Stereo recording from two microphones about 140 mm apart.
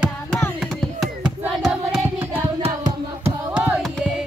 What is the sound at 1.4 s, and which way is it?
Child singing, 5° right (ahead or behind).